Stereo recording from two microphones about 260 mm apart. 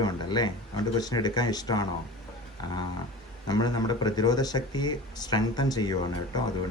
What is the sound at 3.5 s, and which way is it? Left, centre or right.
Speech, centre.